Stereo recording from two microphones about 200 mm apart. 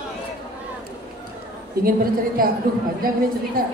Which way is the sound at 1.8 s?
45° right (ahead or behind).